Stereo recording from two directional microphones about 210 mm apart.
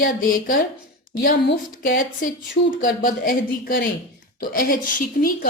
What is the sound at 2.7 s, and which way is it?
A woman's voice, 40° left (ahead or behind).